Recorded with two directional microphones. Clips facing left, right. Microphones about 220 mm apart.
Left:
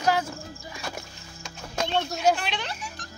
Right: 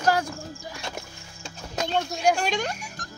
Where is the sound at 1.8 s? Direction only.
Centre (ahead or behind).